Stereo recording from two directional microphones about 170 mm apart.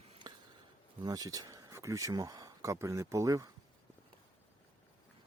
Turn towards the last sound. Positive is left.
turn(degrees=-20)  # may be behind; listen again after turning